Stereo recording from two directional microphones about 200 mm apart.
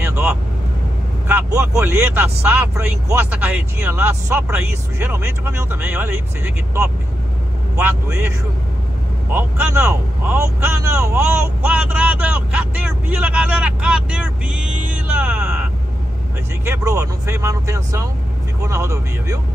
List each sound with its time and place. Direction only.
0.0 s vehicle: 10° right (ahead or behind)
1.7 s speech: 10° right (ahead or behind)
9.3 s speech: 10° right (ahead or behind)